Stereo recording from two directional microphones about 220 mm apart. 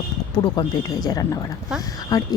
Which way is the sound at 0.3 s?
20° left (ahead or behind).